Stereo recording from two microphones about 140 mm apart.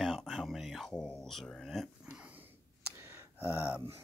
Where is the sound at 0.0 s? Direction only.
Centre (ahead or behind).